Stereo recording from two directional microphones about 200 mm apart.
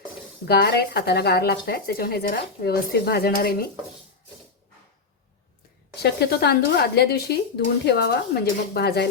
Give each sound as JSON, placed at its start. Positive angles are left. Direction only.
{"t": 0.4, "sound": "speech", "side_deg": 55}
{"t": 6.0, "sound": "speech", "side_deg": 50}